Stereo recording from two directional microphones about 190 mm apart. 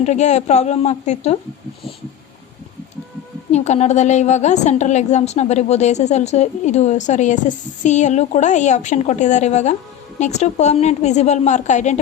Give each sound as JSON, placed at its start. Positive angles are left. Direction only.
{"t": 0.0, "sound": "a woman's voice", "side_deg": 35}
{"t": 3.5, "sound": "a woman's voice", "side_deg": 35}